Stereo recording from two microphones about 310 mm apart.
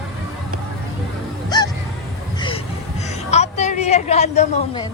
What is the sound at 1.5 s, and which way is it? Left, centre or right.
Music, centre.